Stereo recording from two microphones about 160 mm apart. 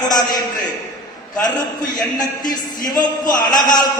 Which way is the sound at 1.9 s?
25° left (ahead or behind).